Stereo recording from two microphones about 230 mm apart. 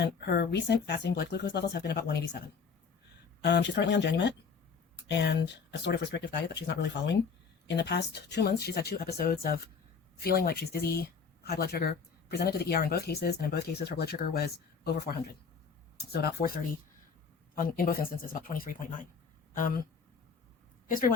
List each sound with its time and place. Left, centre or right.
0.0 s speech: left
3.4 s speech: left
17.5 s speech: left
20.8 s speech: left